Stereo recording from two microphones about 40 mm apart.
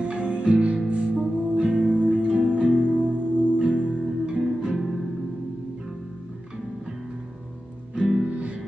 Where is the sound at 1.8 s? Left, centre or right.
Right.